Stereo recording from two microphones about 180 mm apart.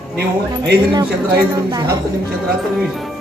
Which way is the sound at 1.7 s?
25° right (ahead or behind).